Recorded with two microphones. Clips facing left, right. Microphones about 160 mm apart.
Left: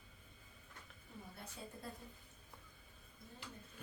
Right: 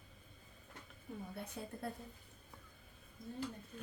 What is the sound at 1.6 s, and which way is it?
Speech, 60° right (ahead or behind).